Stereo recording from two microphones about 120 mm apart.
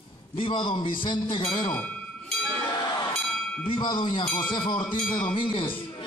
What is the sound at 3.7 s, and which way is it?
A man's voice, 40° left (ahead or behind).